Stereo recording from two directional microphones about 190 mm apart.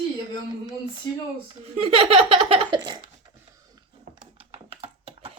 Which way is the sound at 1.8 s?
30° right (ahead or behind).